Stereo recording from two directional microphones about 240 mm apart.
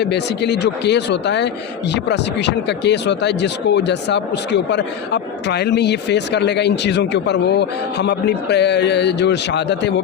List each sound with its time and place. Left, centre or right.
0.0 s speech: left